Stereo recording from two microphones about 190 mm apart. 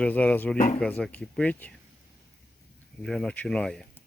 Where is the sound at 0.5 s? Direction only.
45° left (ahead or behind).